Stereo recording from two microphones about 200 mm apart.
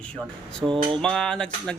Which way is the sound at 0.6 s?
25° right (ahead or behind).